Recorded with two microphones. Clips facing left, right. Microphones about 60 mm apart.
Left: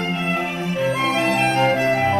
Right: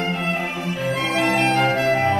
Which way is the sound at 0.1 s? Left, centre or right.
Centre.